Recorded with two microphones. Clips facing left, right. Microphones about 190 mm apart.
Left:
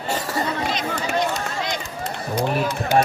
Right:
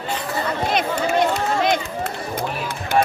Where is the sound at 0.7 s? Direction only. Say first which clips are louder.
Right 4 dB; 60° right (ahead or behind).